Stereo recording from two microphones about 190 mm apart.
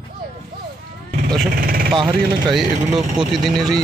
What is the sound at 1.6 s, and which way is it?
Speech, 50° right (ahead or behind).